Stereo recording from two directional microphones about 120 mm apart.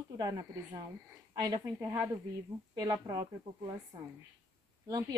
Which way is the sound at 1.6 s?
20° right (ahead or behind).